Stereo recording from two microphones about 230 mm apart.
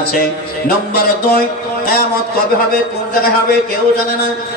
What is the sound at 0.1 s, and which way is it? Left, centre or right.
A man's voice, left.